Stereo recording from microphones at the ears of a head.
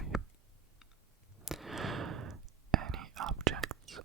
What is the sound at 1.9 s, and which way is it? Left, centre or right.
Whispering, right.